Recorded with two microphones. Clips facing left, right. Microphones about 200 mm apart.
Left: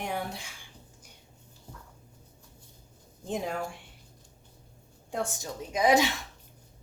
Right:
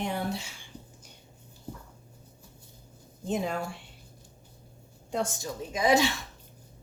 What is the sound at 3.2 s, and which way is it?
Speech, 75° right (ahead or behind).